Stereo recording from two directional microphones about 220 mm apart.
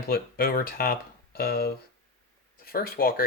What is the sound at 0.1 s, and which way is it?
Speech, 40° left (ahead or behind).